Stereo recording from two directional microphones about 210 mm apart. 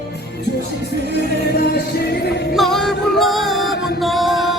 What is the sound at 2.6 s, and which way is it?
Music, centre (ahead or behind).